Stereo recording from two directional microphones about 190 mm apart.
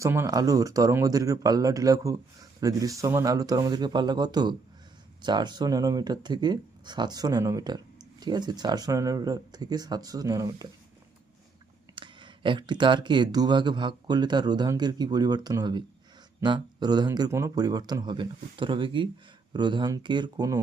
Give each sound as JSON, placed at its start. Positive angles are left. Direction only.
{"t": 0.0, "sound": "a man's voice", "side_deg": -15}
{"t": 11.9, "sound": "speech", "side_deg": -25}